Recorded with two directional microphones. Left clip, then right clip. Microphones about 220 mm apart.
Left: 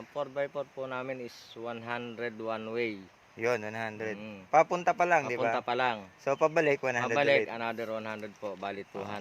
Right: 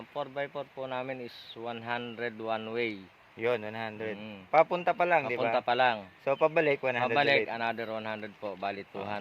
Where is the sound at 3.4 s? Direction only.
20° left (ahead or behind).